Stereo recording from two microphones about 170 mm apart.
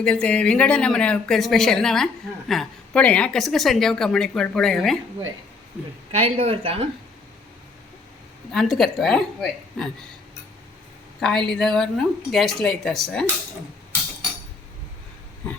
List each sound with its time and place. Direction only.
0.0 s a woman's voice: 5° left (ahead or behind)
6.1 s speech: 40° right (ahead or behind)
8.5 s a woman's voice: centre (ahead or behind)
11.2 s a woman's voice: 5° left (ahead or behind)